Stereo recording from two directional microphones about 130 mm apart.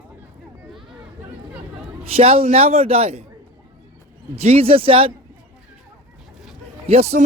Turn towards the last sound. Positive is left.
turn(degrees=-55)  # may be behind; listen again after turning